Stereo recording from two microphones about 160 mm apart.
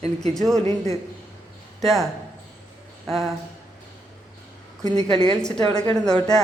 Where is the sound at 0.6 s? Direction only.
45° right (ahead or behind).